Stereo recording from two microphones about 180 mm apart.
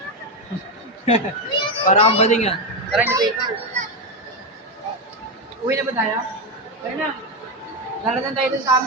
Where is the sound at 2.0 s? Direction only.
35° left (ahead or behind).